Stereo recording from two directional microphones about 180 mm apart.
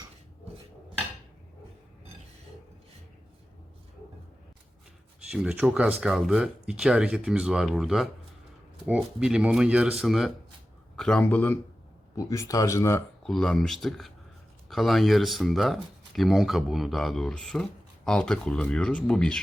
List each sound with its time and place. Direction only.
5.3 s speech: 5° right (ahead or behind); by 13.0 s 15° left (ahead or behind)
13.2 s speech: centre (ahead or behind)